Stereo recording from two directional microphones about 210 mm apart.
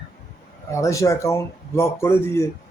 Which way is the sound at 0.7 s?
15° left (ahead or behind).